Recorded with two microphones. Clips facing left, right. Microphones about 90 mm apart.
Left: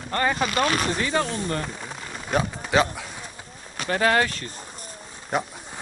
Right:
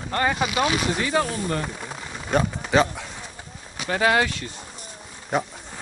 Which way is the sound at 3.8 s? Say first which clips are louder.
Even; 45° left (ahead or behind).